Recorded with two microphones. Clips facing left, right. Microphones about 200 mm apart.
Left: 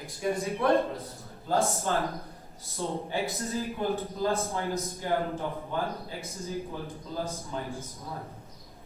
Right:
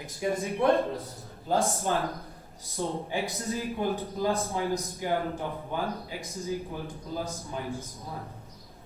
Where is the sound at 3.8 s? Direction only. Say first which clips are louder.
Even; 15° right (ahead or behind).